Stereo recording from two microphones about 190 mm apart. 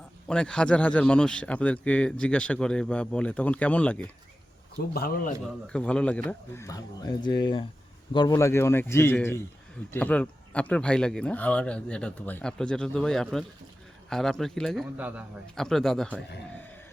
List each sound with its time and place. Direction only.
0.3 s speech: 5° left (ahead or behind)
4.9 s speech: 50° left (ahead or behind)
5.6 s speech: 5° left (ahead or behind)